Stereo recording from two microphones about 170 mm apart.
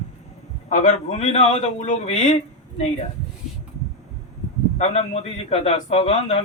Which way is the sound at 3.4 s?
5° right (ahead or behind).